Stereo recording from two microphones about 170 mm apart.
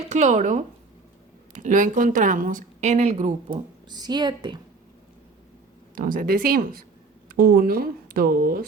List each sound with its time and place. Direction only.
0.0 s a woman's voice: 40° right (ahead or behind)
3.8 s speech: 25° right (ahead or behind)
5.9 s speech: 55° right (ahead or behind)